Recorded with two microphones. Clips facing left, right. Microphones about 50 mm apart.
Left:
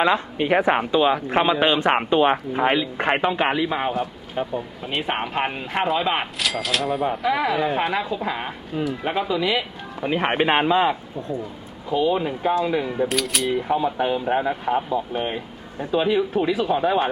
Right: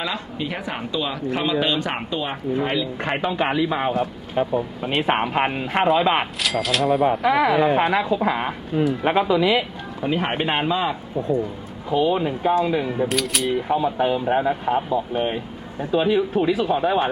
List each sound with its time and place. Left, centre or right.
0.0 s speech: left
2.8 s a man's voice: left
3.3 s a man's voice: centre
3.7 s speech: centre
4.0 s speech: centre
5.2 s speech: right
5.5 s a woman's voice: centre
6.4 s speech: centre
7.1 s a woman's voice: right
10.0 s a man's voice: centre
11.9 s speech: centre